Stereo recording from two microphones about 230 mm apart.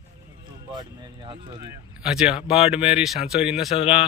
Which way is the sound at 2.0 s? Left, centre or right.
Centre.